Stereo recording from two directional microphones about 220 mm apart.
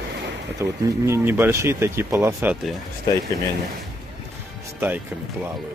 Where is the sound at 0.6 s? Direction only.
15° right (ahead or behind).